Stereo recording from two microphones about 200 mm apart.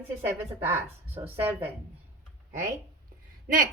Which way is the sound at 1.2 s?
10° right (ahead or behind).